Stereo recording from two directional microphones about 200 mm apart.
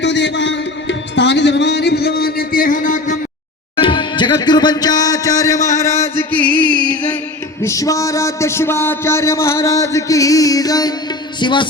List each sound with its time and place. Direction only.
0.0 s music: 60° left (ahead or behind); by 3.2 s 40° left (ahead or behind)
3.8 s speech: 25° left (ahead or behind)
6.5 s music: 25° right (ahead or behind)
7.6 s a man's voice: 15° left (ahead or behind)